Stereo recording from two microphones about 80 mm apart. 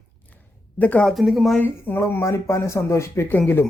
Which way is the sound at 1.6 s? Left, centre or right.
Left.